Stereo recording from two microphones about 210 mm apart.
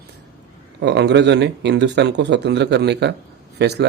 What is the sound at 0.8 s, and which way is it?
Speech, 55° right (ahead or behind).